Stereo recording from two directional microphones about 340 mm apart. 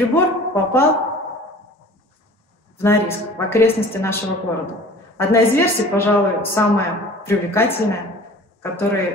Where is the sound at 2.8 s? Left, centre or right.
Centre.